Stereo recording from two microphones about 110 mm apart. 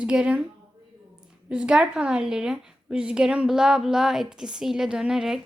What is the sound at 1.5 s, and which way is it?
A woman's voice, 10° right (ahead or behind).